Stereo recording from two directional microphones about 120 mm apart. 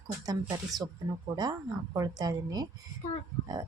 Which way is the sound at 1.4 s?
35° right (ahead or behind).